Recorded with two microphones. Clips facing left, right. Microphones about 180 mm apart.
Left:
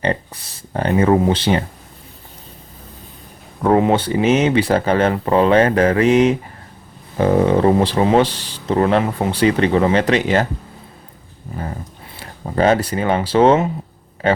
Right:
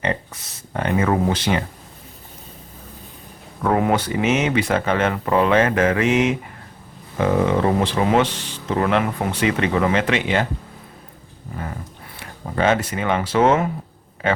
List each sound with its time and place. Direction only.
0.0 s speech: 35° left (ahead or behind)
3.6 s speech: 25° left (ahead or behind)
12.2 s speech: 35° left (ahead or behind)